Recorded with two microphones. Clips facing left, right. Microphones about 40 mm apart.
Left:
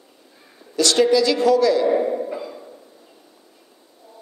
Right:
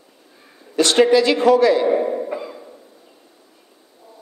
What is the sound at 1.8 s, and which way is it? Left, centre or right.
Speech, centre.